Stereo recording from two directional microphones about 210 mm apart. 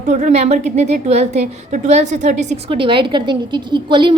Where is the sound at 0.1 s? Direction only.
35° right (ahead or behind).